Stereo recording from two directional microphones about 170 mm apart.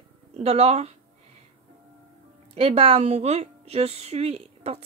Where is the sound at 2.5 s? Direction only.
35° right (ahead or behind).